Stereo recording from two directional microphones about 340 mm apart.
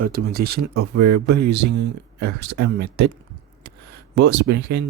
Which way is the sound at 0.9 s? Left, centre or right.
Right.